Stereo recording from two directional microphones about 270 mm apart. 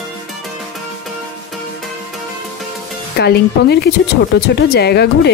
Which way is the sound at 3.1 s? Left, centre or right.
Left.